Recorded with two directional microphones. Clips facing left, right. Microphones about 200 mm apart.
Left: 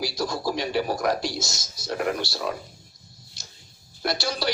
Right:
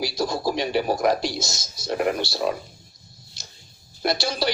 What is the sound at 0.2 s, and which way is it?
A man's voice, 20° right (ahead or behind).